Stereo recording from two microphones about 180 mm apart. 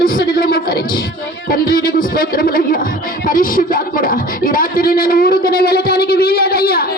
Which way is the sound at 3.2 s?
50° left (ahead or behind).